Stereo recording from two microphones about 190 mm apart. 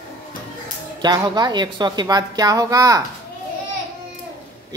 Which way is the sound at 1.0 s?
20° right (ahead or behind).